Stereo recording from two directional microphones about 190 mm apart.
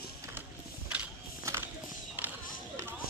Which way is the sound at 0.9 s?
5° right (ahead or behind).